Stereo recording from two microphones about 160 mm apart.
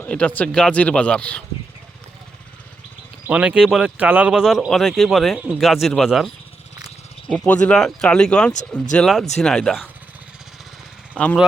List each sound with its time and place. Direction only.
0.0 s speech: 10° left (ahead or behind)
3.2 s speech: 10° right (ahead or behind)